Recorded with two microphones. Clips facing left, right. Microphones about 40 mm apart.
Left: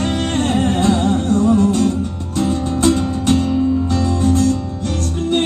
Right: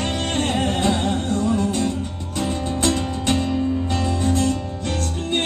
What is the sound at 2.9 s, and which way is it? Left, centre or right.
Music, right.